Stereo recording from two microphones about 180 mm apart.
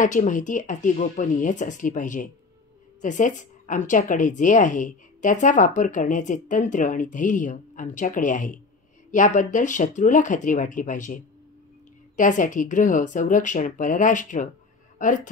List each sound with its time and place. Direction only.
0.0 s a woman's voice: 45° left (ahead or behind)
12.2 s a woman's voice: 45° left (ahead or behind)